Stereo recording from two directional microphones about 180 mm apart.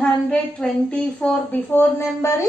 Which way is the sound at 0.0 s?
5° left (ahead or behind).